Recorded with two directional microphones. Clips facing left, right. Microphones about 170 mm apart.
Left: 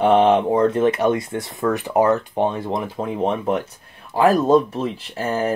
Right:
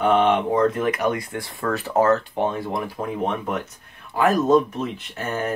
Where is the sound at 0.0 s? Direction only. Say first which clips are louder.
Left 4 dB; 30° left (ahead or behind).